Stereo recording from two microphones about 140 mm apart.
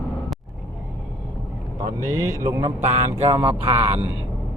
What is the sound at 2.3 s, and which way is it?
Speech, 20° right (ahead or behind).